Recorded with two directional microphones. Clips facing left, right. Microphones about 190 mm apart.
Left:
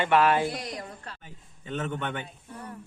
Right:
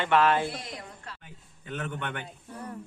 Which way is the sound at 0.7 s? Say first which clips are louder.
Left 4 dB; 35° left (ahead or behind).